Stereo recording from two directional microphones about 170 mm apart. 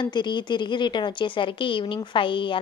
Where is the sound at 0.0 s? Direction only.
25° left (ahead or behind).